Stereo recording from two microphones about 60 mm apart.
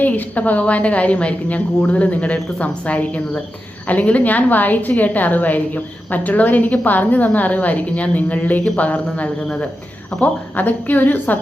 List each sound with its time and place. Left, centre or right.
0.0 s a woman's voice: left
10.6 s a woman's voice: left